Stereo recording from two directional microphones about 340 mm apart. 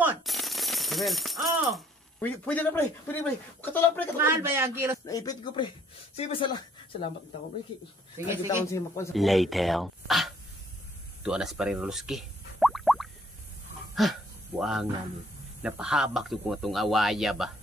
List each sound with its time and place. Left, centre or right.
0.0 s speech: centre
4.2 s a man's voice: centre
5.0 s speech: centre
8.6 s speech: centre
11.2 s plop: centre
14.0 s speech: centre